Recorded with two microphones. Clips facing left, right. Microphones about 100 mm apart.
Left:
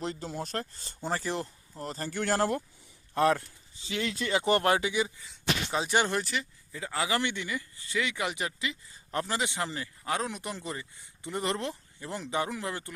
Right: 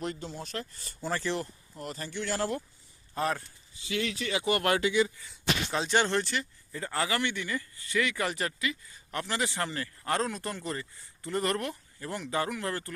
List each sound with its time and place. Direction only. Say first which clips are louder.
0.0 s speech: even; 35° left (ahead or behind)
0.3 s speech: left 3 dB; 45° left (ahead or behind)
0.8 s speech: even; 25° left (ahead or behind)
1.8 s speech: left 3 dB; 35° left (ahead or behind)
3.2 s speech: left 6 dB; 90° left
4.3 s speech: left 4 dB; 35° left (ahead or behind)
4.6 s speech: right 1 dB; 20° left (ahead or behind); by 7.1 s 5° left (ahead or behind)
7.1 s speech: even; 20° left (ahead or behind)
8.5 s speech: right 2 dB; 25° left (ahead or behind)
9.4 s speech: right 1 dB; 20° left (ahead or behind)